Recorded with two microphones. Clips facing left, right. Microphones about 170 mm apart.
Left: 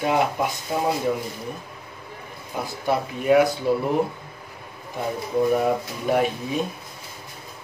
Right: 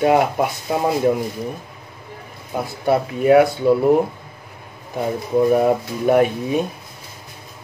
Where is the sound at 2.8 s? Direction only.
60° right (ahead or behind).